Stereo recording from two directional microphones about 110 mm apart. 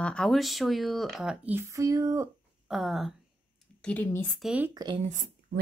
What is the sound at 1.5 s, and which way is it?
Speech, 25° right (ahead or behind).